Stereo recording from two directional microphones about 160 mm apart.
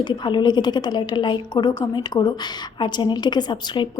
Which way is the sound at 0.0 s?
30° left (ahead or behind).